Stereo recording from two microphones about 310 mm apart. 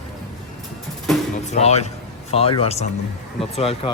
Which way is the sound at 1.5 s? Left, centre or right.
Left.